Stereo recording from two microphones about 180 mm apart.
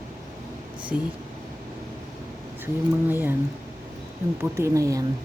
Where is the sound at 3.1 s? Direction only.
10° right (ahead or behind).